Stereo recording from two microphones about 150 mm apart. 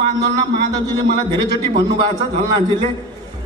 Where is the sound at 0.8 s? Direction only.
25° right (ahead or behind).